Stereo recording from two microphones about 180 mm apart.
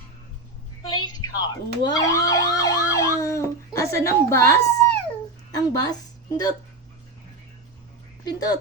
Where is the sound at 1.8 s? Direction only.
20° left (ahead or behind).